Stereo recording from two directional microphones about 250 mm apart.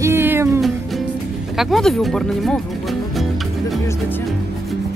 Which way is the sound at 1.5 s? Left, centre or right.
Centre.